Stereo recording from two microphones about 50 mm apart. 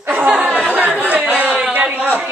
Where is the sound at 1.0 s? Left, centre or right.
Right.